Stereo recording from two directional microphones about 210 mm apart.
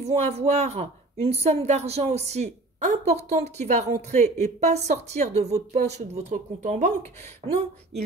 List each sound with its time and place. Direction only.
0.0 s a woman's voice: 30° right (ahead or behind)